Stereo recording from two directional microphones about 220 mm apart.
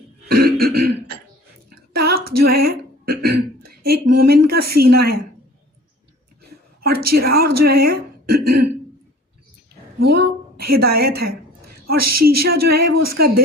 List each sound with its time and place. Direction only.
0.3 s throat clearing: 45° right (ahead or behind)
2.0 s speech: 45° right (ahead or behind)
6.4 s a woman's voice: 45° right (ahead or behind)
10.0 s a woman's voice: 45° right (ahead or behind)